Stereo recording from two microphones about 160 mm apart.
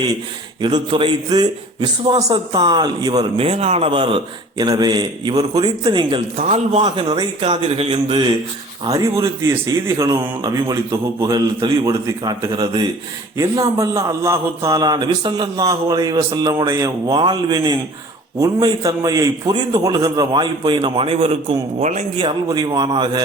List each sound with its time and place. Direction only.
0.6 s a man's voice: 30° right (ahead or behind)
3.3 s a man's voice: 40° right (ahead or behind)
6.4 s a man's voice: 40° right (ahead or behind)
6.8 s a man's voice: 30° right (ahead or behind)
8.9 s a man's voice: 20° right (ahead or behind); by 22.2 s 45° right (ahead or behind)
22.2 s a man's voice: 25° right (ahead or behind)